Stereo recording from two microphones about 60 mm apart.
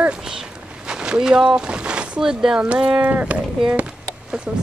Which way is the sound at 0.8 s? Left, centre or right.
Centre.